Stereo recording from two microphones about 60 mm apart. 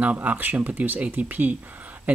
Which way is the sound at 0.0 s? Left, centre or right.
Right.